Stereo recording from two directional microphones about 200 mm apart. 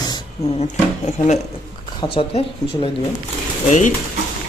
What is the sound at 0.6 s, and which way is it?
Speech, 35° left (ahead or behind).